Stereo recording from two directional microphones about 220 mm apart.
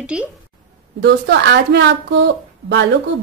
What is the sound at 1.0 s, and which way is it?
A woman's voice, 50° right (ahead or behind).